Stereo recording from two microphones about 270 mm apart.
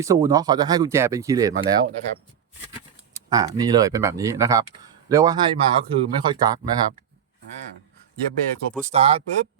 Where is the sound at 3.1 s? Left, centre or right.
Centre.